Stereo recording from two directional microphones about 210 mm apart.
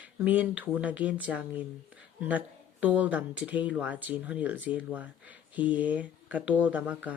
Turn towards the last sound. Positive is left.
turn(degrees=-5)  # may be behind; listen again after turning